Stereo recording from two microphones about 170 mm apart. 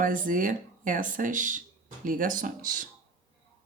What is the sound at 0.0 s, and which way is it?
Speech, 55° right (ahead or behind).